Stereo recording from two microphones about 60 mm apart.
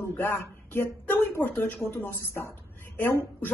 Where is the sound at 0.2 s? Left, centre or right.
Left.